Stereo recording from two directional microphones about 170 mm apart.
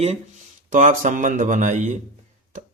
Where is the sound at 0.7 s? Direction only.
50° right (ahead or behind).